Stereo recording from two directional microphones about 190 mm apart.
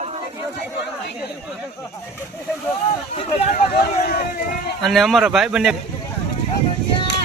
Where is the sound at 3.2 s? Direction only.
35° left (ahead or behind).